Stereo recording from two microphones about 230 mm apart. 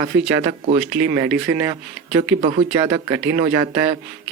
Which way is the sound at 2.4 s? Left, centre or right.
Right.